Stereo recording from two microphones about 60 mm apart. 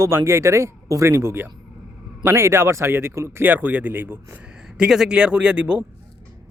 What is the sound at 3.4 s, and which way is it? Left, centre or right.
Speech, right.